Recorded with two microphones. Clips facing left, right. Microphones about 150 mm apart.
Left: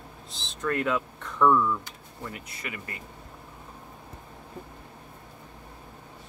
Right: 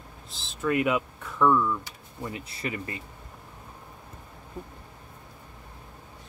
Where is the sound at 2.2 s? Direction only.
25° right (ahead or behind).